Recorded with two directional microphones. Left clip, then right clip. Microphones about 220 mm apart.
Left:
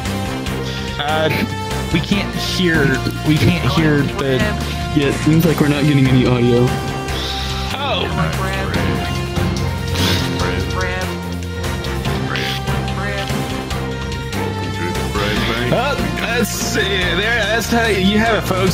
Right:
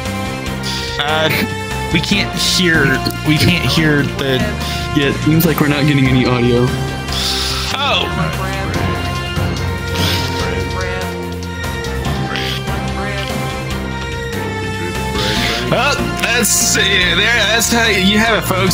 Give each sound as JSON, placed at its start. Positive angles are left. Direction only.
{"t": 1.0, "sound": "speech", "side_deg": -30}
{"t": 5.6, "sound": "speech", "side_deg": -25}
{"t": 15.2, "sound": "music", "side_deg": -35}